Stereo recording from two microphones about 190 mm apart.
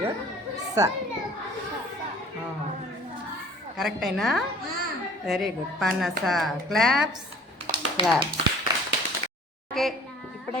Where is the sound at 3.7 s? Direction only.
Centre (ahead or behind).